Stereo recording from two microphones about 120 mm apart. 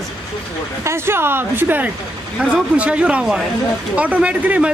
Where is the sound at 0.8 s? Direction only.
20° right (ahead or behind).